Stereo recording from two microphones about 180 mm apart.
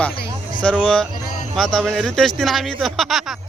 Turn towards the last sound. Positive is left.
turn(degrees=0)  # may be behind; listen again after turning